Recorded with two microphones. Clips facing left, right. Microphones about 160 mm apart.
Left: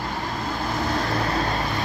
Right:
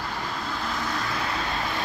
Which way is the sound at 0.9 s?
40° left (ahead or behind).